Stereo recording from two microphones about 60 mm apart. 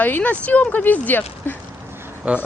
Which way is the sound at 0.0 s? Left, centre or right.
Left.